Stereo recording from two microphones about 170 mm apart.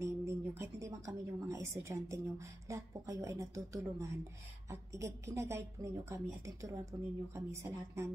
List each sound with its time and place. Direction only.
0.0 s a woman's voice: 15° right (ahead or behind)